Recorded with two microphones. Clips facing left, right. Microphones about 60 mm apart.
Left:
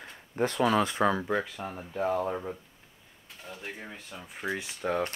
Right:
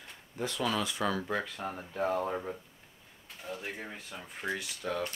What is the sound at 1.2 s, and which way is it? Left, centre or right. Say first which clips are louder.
Speech: left 3 dB; centre.